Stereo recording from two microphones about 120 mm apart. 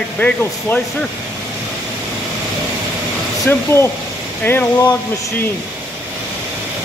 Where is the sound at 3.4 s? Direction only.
20° left (ahead or behind).